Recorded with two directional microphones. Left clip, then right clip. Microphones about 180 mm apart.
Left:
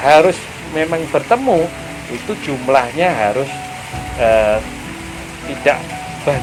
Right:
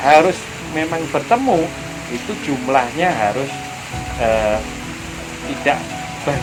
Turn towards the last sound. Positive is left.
turn(degrees=45)  # may be behind; listen again after turning